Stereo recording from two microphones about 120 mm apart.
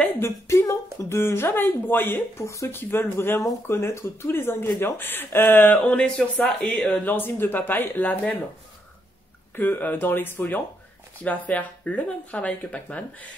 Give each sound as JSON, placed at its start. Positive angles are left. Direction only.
{"t": 0.2, "sound": "speech", "side_deg": 25}
{"t": 9.6, "sound": "speech", "side_deg": 15}